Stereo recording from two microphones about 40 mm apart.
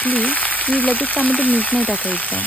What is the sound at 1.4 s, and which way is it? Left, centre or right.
Speech, left.